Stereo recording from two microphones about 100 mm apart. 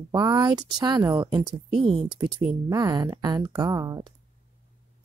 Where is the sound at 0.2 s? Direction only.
45° right (ahead or behind).